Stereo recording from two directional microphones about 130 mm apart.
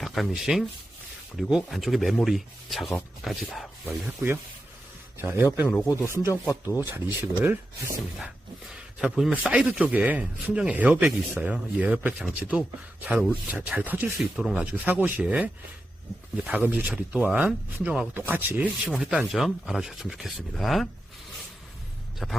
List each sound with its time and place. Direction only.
0.0 s speech: centre (ahead or behind)
3.8 s speech: 10° right (ahead or behind)
6.5 s speech: 25° left (ahead or behind)
6.8 s speech: 15° right (ahead or behind)
8.7 s speech: 5° right (ahead or behind)
18.9 s speech: 5° right (ahead or behind)
22.2 s speech: centre (ahead or behind)